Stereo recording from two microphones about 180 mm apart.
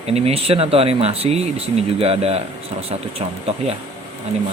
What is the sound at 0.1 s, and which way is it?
Speech, 35° right (ahead or behind).